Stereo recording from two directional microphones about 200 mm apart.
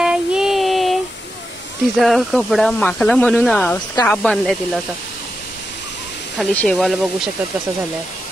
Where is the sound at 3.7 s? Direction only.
20° left (ahead or behind).